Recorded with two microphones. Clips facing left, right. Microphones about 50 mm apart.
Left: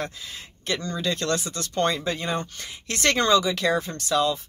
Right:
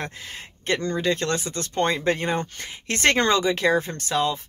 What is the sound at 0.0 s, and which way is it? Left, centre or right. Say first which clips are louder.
A woman's voice: even; right.